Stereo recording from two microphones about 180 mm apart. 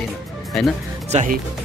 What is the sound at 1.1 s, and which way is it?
Speech, 40° right (ahead or behind).